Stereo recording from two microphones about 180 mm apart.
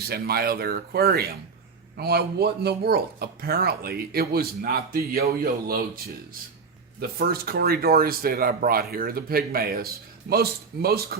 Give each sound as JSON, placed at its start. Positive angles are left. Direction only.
{"t": 0.1, "sound": "speech", "side_deg": -60}
{"t": 7.0, "sound": "speech", "side_deg": -60}